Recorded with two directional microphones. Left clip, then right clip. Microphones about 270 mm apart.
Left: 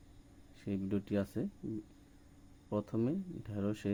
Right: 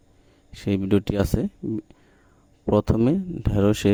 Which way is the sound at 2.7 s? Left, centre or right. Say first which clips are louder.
Right 16 dB; right.